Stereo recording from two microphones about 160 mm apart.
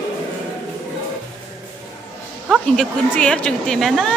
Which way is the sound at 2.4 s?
Centre (ahead or behind).